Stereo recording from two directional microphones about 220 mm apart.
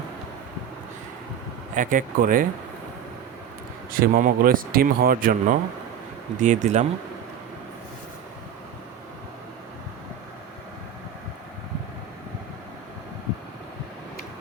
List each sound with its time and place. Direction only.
1.7 s speech: 35° right (ahead or behind)
3.9 s speech: 40° right (ahead or behind)